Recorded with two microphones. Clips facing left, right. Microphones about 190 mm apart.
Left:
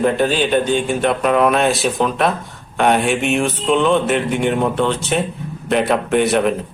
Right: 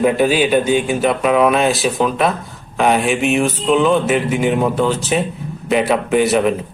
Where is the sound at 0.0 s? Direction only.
10° right (ahead or behind).